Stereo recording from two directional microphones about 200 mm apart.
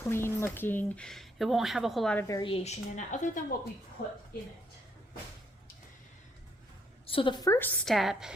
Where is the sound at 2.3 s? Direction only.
25° left (ahead or behind).